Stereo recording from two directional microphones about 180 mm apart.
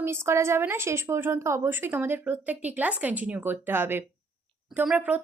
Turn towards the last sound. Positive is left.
turn(degrees=-5)  # may be behind; listen again after turning